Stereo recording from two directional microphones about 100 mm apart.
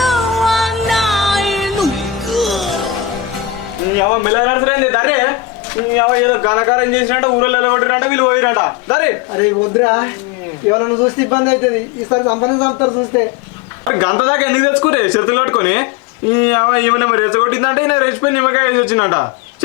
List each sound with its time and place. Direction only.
0.0 s music: centre (ahead or behind)
4.3 s a man's voice: 25° left (ahead or behind)